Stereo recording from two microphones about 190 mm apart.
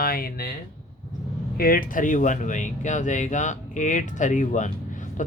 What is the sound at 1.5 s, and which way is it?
Speech, 50° left (ahead or behind).